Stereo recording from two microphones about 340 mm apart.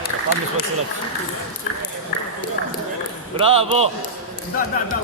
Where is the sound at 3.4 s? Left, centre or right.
Centre.